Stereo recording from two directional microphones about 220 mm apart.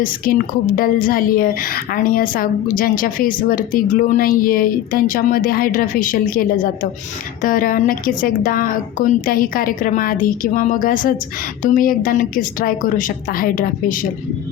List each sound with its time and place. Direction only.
0.3 s a woman's voice: 40° left (ahead or behind)